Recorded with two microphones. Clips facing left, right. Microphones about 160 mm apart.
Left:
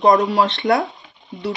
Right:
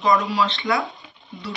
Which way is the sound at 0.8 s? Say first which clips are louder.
Left 2 dB; centre (ahead or behind).